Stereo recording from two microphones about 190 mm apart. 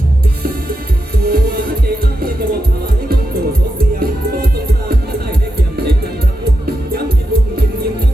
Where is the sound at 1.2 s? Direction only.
50° right (ahead or behind).